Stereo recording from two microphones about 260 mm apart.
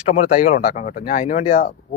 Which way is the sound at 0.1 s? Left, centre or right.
Left.